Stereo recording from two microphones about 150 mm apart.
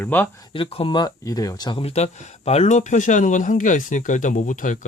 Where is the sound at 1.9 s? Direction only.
45° left (ahead or behind).